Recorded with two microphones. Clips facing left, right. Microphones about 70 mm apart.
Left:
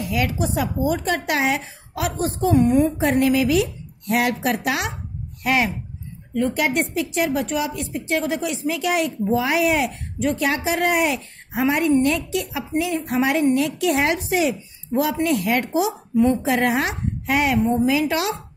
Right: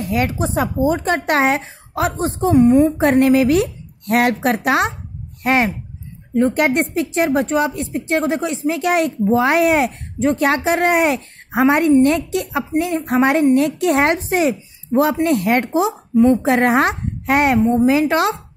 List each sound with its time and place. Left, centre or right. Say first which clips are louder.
0.0 s speech: right 3 dB; right
3.0 s a woman's voice: right 5 dB; right
11.5 s a woman's voice: right 6 dB; right
16.4 s a woman's voice: right 5 dB; right
17.6 s a woman's voice: right 4 dB; right
17.8 s speech: right 5 dB; right